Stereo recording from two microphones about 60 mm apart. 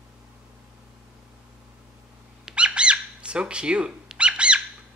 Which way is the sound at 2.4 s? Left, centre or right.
Centre.